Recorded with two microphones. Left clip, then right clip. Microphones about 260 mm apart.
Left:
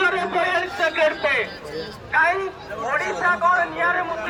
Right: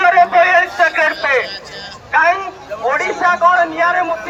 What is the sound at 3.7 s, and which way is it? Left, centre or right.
Speech, right.